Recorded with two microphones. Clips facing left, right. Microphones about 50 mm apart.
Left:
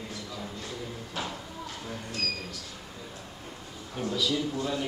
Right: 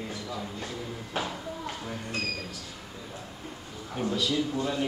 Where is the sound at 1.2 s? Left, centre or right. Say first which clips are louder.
Right 3 dB; right.